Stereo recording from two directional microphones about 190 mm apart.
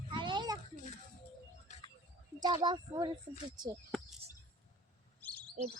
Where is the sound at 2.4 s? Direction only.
25° right (ahead or behind).